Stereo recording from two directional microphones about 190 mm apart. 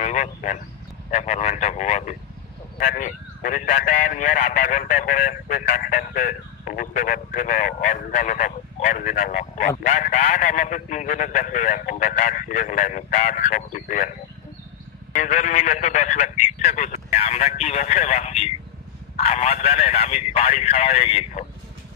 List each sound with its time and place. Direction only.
0.0 s speech: 40° left (ahead or behind)
15.1 s speech: 40° left (ahead or behind)